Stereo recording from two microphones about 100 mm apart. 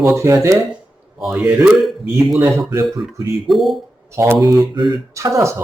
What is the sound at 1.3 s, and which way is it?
Speech, 10° right (ahead or behind).